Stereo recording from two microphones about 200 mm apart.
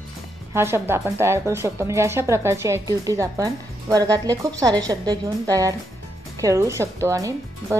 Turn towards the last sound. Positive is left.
turn(degrees=-15)  # may be behind; listen again after turning